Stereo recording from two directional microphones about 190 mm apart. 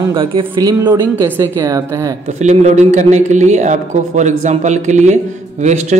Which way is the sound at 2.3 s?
40° right (ahead or behind).